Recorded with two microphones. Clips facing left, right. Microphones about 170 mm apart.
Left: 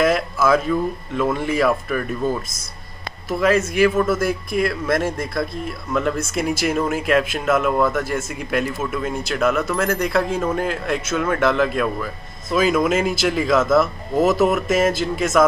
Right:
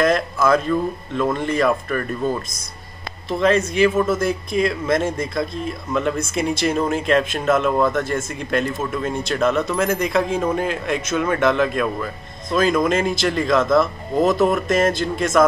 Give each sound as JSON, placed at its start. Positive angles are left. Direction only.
{"t": 0.0, "sound": "speech", "side_deg": 5}
{"t": 4.6, "sound": "speech", "side_deg": -20}
{"t": 5.9, "sound": "speech", "side_deg": 0}